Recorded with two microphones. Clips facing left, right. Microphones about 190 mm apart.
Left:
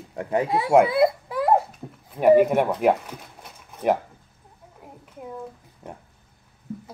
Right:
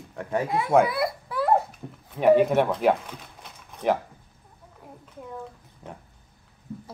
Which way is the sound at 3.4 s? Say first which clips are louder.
Left 2 dB; 10° left (ahead or behind).